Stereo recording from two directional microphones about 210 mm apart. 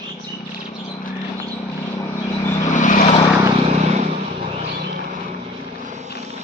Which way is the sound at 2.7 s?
35° left (ahead or behind).